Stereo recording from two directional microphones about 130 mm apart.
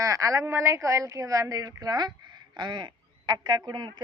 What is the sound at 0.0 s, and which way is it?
A man's voice, 25° right (ahead or behind).